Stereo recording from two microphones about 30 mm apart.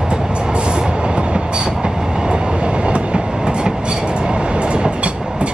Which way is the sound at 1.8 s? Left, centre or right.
Right.